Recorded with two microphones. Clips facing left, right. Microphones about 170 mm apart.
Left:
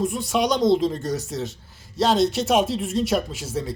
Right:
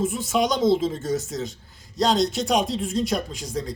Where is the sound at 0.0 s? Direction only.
Centre (ahead or behind).